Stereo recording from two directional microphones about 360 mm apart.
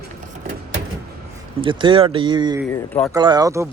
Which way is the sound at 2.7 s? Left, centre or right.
Centre.